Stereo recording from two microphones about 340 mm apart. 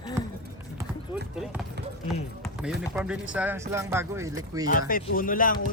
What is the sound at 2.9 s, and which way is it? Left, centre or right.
Speech, centre.